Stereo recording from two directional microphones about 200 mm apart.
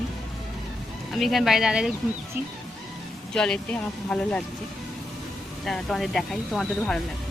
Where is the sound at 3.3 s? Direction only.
5° left (ahead or behind).